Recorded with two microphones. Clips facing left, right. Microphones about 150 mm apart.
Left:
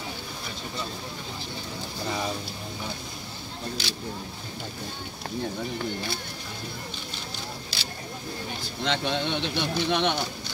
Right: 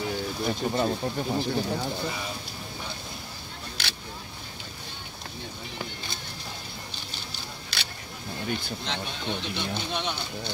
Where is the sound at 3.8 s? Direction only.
65° right (ahead or behind).